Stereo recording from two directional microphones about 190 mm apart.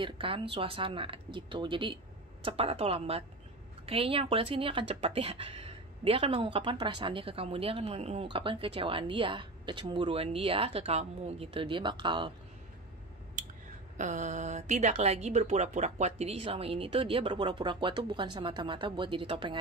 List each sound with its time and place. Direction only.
0.0 s a woman's voice: 30° right (ahead or behind)
13.9 s speech: 40° right (ahead or behind)